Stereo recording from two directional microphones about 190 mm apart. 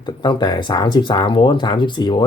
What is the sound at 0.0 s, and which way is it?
Speech, 25° left (ahead or behind).